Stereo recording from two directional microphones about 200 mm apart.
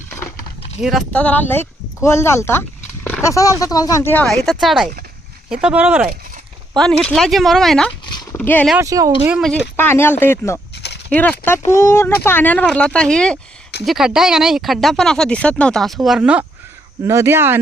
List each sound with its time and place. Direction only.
0.8 s speech: centre (ahead or behind)
6.7 s speech: 5° left (ahead or behind)
8.0 s horse: 20° left (ahead or behind)
8.4 s speech: 5° left (ahead or behind)
8.8 s speech: 15° right (ahead or behind)
9.3 s speech: 5° left (ahead or behind)
10.8 s a sound: 55° left (ahead or behind)
11.1 s speech: 10° left (ahead or behind); by 17.6 s 10° right (ahead or behind)